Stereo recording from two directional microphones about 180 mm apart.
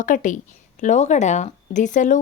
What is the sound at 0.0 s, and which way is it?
A woman's voice, 45° left (ahead or behind).